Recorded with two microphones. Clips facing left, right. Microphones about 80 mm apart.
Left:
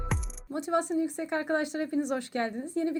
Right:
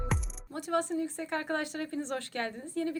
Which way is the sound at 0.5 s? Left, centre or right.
Centre.